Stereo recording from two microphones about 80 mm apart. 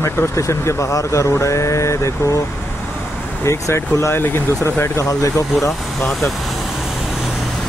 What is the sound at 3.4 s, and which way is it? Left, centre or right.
Speech, left.